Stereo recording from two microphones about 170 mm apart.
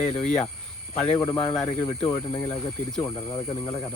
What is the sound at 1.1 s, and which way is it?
Speech, 15° left (ahead or behind).